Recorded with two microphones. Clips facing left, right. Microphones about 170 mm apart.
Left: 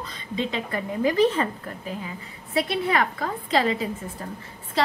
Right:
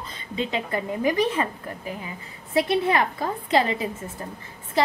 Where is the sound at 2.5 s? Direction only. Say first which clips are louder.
Right 2 dB; 25° right (ahead or behind).